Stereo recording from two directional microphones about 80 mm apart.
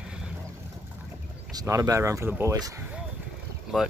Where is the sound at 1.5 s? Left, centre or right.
Right.